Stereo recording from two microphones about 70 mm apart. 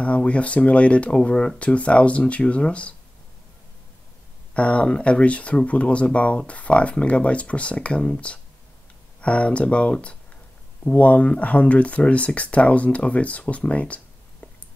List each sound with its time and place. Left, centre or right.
0.0 s speech: centre
4.6 s speech: centre